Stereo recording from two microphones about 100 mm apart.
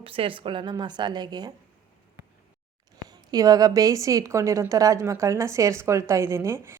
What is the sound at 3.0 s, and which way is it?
A woman's voice, 40° right (ahead or behind).